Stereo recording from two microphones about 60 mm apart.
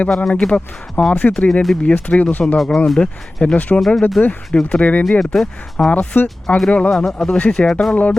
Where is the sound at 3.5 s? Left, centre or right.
Left.